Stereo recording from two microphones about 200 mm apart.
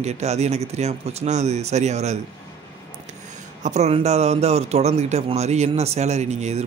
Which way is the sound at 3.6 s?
35° right (ahead or behind).